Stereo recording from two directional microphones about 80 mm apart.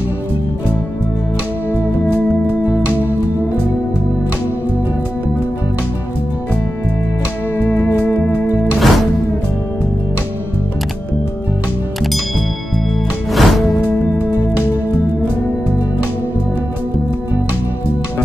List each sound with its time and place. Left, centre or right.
8.1 s music: left
8.7 s music: centre
13.3 s music: centre